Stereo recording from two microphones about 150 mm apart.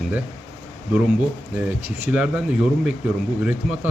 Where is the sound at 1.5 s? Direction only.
10° right (ahead or behind).